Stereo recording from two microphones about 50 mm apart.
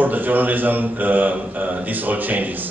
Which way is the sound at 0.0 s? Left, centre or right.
Right.